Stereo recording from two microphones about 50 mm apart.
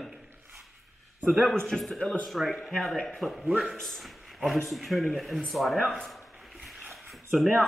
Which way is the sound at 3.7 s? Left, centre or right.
Centre.